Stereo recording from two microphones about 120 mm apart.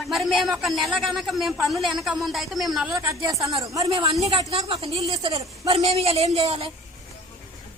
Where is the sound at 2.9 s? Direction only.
25° right (ahead or behind).